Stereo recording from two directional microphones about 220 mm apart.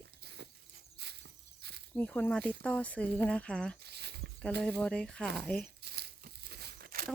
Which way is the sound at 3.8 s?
50° right (ahead or behind).